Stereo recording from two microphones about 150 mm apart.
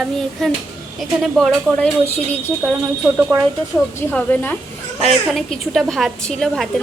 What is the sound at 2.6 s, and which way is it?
Speech, 15° right (ahead or behind).